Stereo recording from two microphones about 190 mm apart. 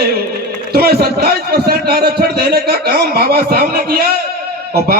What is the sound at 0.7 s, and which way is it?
A man's voice, 55° right (ahead or behind).